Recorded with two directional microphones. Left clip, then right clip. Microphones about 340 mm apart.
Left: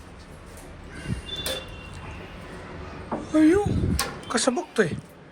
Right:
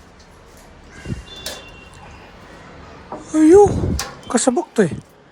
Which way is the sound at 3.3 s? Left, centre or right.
Centre.